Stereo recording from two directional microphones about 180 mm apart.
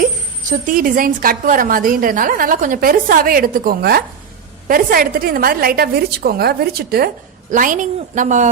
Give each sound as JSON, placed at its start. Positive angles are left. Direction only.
{"t": 0.7, "sound": "a woman's voice", "side_deg": -50}
{"t": 7.5, "sound": "a woman's voice", "side_deg": -45}